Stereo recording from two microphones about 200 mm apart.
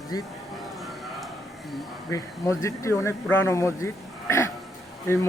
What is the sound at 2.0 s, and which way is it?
Speech, 15° left (ahead or behind).